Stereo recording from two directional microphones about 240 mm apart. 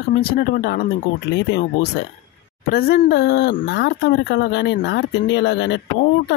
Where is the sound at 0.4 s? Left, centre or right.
Left.